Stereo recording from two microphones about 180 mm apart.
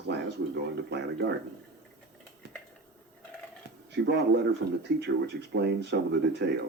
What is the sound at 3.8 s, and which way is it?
Speech, 70° right (ahead or behind).